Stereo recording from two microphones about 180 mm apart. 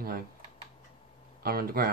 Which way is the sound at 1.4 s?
55° right (ahead or behind).